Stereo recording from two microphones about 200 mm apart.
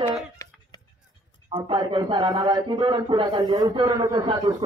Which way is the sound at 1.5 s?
20° right (ahead or behind).